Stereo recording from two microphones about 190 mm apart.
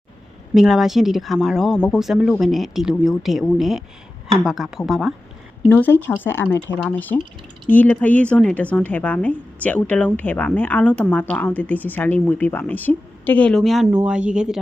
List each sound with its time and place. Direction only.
0.5 s a woman's voice: centre (ahead or behind)